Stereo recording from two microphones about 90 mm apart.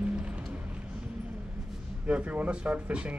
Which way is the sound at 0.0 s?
15° right (ahead or behind).